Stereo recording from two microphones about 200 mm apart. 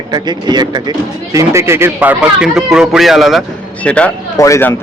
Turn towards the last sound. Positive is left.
turn(degrees=10)  # may be behind; listen again after turning